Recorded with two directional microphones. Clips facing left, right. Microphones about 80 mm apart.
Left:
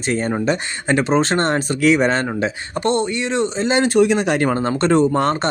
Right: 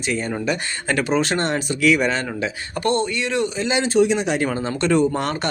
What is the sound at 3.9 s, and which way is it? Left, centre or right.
Speech, left.